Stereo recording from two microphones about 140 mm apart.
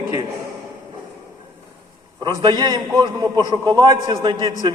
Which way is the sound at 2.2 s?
30° right (ahead or behind).